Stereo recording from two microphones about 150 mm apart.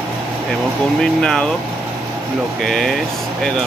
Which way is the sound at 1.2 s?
5° left (ahead or behind).